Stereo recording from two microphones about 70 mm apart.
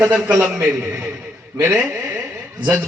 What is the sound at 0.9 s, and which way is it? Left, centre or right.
Speech, right.